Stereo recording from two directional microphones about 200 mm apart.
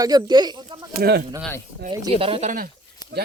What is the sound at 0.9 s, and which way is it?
Speech, 55° right (ahead or behind).